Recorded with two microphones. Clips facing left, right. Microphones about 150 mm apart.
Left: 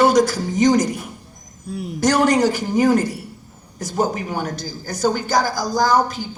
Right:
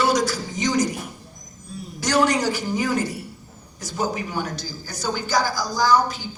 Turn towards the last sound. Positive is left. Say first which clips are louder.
# left 2 dB
turn(degrees=50)  # may be behind; listen again after turning